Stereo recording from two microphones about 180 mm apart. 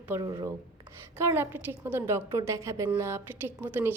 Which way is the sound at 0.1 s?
20° right (ahead or behind).